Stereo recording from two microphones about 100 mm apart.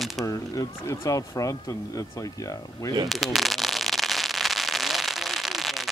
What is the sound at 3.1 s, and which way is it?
Firecracker, centre (ahead or behind).